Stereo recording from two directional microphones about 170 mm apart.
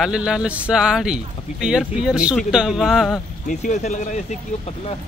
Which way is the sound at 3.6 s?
45° left (ahead or behind).